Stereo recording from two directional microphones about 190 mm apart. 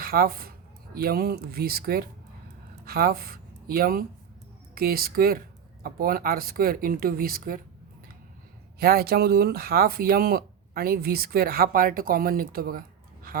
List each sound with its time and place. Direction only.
0.0 s speech: 50° right (ahead or behind)
8.8 s speech: 55° right (ahead or behind)
13.3 s a sound: 50° right (ahead or behind)